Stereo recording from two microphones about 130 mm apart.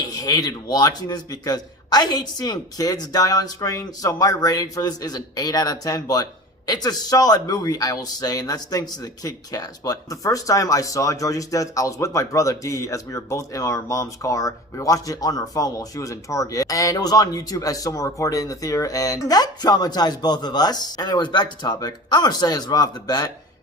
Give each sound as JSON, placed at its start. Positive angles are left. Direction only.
{"t": 0.1, "sound": "a man's voice", "side_deg": 30}